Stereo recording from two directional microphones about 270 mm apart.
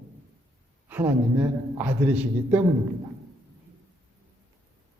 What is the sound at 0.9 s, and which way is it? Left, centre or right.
A man's voice, centre.